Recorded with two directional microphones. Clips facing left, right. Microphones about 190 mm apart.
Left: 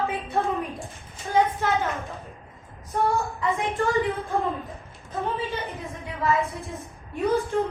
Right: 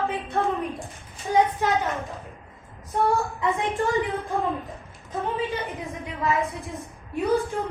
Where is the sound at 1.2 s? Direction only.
15° right (ahead or behind).